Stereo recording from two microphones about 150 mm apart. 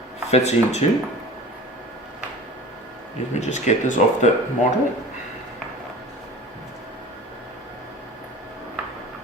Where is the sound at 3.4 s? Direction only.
50° left (ahead or behind).